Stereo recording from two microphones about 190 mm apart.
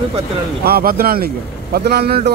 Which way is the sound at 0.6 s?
55° right (ahead or behind).